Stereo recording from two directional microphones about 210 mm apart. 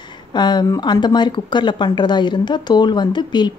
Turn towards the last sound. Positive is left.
turn(degrees=20)  # may be behind; listen again after turning